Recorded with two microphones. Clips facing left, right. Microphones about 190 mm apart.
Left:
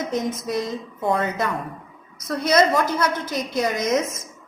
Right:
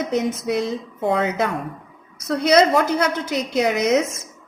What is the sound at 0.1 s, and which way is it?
A woman's voice, 65° right (ahead or behind).